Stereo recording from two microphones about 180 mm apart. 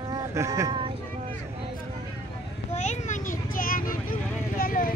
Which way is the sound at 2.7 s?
40° left (ahead or behind).